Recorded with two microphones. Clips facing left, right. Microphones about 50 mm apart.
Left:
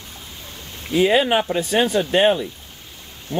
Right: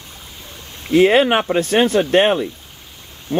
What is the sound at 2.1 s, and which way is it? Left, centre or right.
Speech, right.